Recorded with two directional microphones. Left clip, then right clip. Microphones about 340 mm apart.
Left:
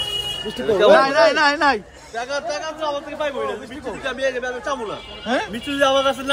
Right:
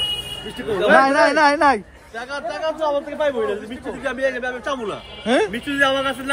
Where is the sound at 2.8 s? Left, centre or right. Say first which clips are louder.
Right 5 dB; right.